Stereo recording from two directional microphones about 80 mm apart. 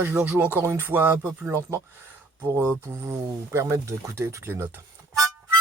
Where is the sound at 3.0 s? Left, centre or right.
Right.